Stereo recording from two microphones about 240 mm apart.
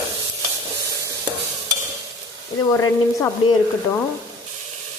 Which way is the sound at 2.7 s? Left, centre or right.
Centre.